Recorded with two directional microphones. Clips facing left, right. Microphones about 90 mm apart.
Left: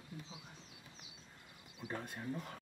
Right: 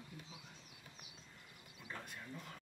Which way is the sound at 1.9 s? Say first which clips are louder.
Left 7 dB; 35° left (ahead or behind).